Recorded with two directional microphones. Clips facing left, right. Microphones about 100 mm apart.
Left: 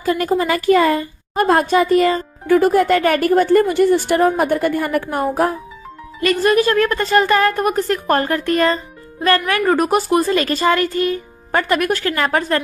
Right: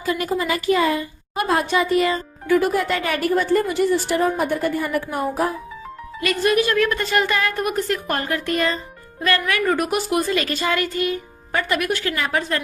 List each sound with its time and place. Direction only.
0.0 s speech: 45° left (ahead or behind)
6.1 s speech: 40° left (ahead or behind)